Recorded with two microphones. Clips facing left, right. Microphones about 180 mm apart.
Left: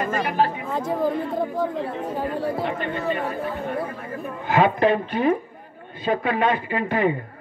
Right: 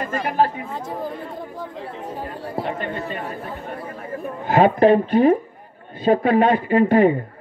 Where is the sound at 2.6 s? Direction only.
40° right (ahead or behind).